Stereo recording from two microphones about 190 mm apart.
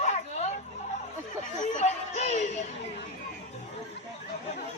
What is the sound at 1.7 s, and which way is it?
Music, 35° left (ahead or behind).